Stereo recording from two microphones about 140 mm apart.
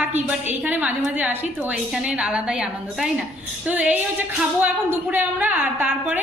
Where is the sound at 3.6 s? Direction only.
10° right (ahead or behind).